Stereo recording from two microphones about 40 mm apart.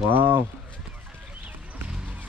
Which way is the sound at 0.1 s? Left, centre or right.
Right.